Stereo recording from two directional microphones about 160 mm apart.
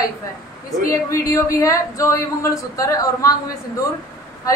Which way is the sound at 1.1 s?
20° left (ahead or behind).